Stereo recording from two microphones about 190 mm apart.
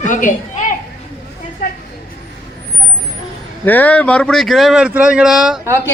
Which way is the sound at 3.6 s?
10° left (ahead or behind).